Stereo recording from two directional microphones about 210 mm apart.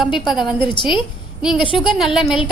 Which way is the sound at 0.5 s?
20° left (ahead or behind).